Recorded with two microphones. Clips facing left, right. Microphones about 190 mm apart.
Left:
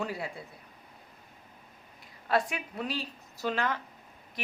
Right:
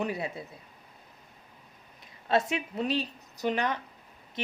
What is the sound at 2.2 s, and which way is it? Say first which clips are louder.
A woman's voice: right 2 dB; 25° right (ahead or behind).